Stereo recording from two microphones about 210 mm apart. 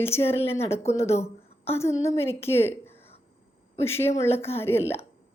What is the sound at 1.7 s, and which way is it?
A woman's voice, 15° left (ahead or behind).